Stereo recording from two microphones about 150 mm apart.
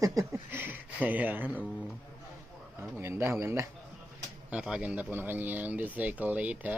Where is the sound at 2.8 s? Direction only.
15° right (ahead or behind).